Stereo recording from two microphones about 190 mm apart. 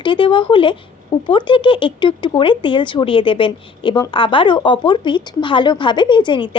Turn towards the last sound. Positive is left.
turn(degrees=25)  # may be behind; listen again after turning